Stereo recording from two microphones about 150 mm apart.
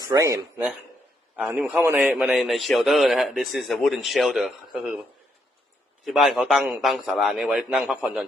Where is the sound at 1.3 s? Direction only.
5° right (ahead or behind).